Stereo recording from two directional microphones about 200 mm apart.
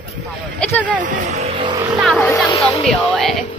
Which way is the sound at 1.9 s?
Centre (ahead or behind).